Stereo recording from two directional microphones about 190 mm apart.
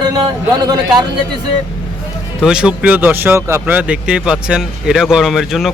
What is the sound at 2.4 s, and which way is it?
Speech, 5° right (ahead or behind).